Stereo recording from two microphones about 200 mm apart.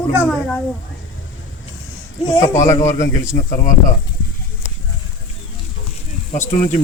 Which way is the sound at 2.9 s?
15° left (ahead or behind).